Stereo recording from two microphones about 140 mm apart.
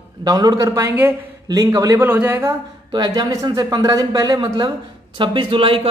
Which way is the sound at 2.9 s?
30° right (ahead or behind).